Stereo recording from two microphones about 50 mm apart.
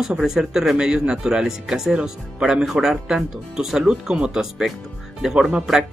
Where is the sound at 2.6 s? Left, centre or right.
Centre.